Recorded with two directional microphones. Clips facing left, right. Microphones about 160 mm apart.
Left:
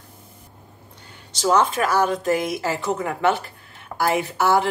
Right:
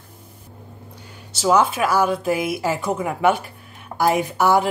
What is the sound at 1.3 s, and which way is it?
Speech, 10° right (ahead or behind).